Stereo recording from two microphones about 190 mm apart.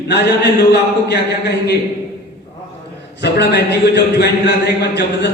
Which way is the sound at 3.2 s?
60° left (ahead or behind).